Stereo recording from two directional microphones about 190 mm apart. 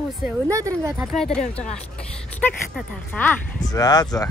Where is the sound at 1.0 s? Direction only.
Centre (ahead or behind).